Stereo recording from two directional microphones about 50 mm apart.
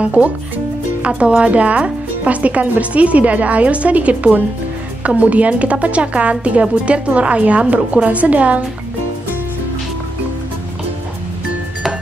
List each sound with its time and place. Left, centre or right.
0.0 s speech: right